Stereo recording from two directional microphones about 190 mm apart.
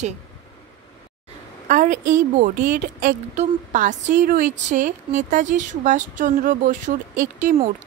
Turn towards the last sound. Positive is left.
turn(degrees=-40)  # may be behind; listen again after turning